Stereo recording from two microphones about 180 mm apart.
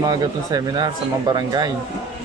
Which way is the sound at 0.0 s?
20° right (ahead or behind).